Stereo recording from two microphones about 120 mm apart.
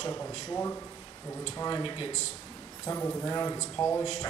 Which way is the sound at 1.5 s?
35° left (ahead or behind).